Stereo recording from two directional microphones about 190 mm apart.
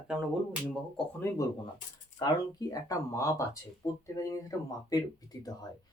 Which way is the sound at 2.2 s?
20° left (ahead or behind).